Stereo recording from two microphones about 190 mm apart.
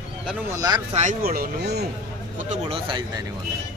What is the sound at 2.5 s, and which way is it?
Speech, 30° right (ahead or behind).